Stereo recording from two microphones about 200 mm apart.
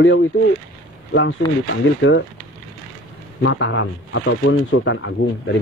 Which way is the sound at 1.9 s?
65° left (ahead or behind).